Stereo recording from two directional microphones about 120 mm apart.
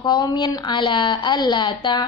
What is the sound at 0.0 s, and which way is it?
A woman's voice, 35° left (ahead or behind).